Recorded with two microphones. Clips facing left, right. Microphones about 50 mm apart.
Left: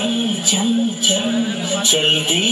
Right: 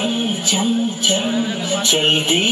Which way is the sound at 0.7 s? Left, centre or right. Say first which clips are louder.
Even; centre.